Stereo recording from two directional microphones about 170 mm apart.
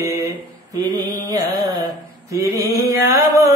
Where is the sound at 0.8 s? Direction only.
20° right (ahead or behind).